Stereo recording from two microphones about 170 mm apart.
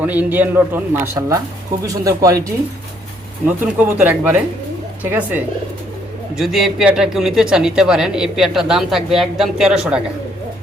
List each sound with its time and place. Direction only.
0.0 s a man's voice: 10° right (ahead or behind)
6.3 s speech: centre (ahead or behind)